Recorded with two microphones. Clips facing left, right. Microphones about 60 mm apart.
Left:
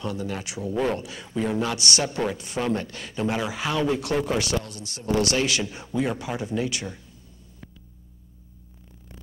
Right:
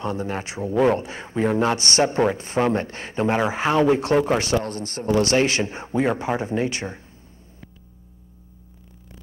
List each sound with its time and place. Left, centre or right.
0.0 s a man's voice: right